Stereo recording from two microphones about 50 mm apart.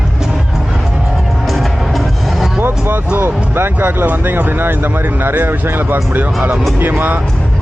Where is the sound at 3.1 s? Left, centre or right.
Right.